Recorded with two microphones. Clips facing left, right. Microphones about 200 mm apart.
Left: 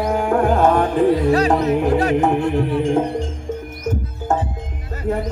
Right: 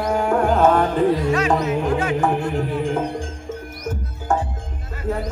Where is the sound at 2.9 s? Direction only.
25° left (ahead or behind).